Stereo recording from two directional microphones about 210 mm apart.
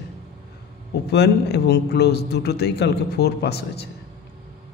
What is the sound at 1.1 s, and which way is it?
A man's voice, 50° left (ahead or behind).